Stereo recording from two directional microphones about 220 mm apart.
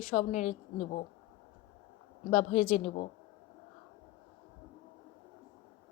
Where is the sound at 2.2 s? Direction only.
30° left (ahead or behind).